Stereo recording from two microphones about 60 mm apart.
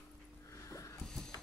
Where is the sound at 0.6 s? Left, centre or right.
Left.